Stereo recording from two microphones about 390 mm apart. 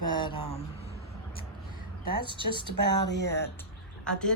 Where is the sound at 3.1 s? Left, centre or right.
Left.